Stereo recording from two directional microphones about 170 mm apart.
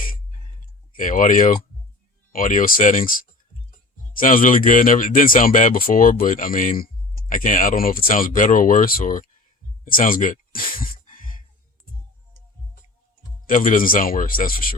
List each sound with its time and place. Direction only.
0.9 s speech: 50° left (ahead or behind)
13.5 s speech: 50° left (ahead or behind)